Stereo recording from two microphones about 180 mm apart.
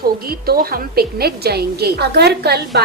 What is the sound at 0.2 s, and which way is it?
A woman's voice, 55° right (ahead or behind).